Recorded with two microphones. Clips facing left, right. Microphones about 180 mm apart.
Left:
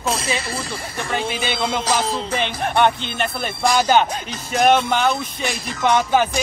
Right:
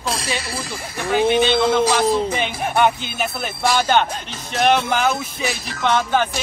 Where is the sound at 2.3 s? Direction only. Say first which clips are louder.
Even; 5° right (ahead or behind).